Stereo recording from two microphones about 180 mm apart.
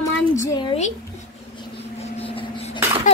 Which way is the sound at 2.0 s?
35° left (ahead or behind).